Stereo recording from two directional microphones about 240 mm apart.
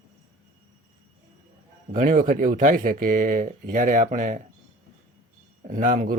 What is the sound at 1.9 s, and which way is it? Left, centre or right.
Speech, right.